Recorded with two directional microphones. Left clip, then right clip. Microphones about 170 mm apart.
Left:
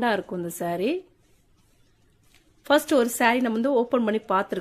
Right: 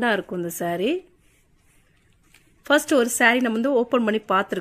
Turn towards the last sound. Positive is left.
turn(degrees=-20)  # may be behind; listen again after turning